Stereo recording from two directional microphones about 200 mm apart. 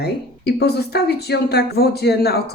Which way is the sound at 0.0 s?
55° left (ahead or behind).